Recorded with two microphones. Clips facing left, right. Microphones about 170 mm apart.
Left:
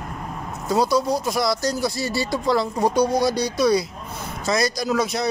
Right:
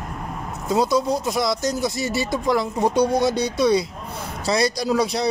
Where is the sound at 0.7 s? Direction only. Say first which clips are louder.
Even; 20° right (ahead or behind).